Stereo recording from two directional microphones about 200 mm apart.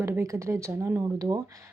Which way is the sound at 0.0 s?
15° right (ahead or behind).